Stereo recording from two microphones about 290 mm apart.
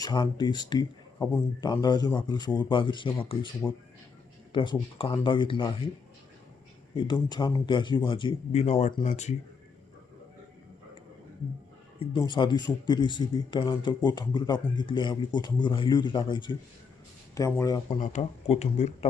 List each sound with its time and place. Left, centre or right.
0.0 s speech: centre
6.9 s speech: centre
11.9 s speech: centre
18.0 s speech: left